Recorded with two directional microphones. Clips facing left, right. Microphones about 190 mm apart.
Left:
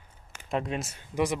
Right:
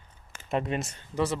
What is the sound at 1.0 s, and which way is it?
Speech, 10° left (ahead or behind).